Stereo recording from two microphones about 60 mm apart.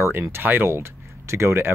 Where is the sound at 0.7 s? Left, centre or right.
Right.